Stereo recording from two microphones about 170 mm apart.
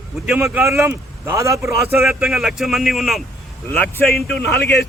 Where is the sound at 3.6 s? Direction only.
10° left (ahead or behind).